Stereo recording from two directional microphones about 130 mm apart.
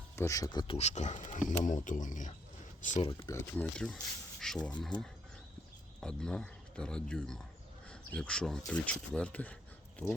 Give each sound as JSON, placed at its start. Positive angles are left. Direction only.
{"t": 0.2, "sound": "speech", "side_deg": 25}
{"t": 0.7, "sound": "speech", "side_deg": 60}
{"t": 3.0, "sound": "speech", "side_deg": 45}
{"t": 3.6, "sound": "speech", "side_deg": 10}
{"t": 6.0, "sound": "speech", "side_deg": 5}